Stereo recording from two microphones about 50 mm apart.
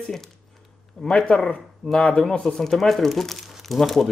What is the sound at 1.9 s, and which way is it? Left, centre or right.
Speech, left.